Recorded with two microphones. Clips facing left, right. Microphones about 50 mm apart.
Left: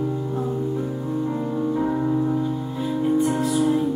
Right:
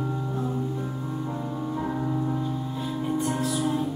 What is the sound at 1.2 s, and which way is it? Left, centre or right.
Music, centre.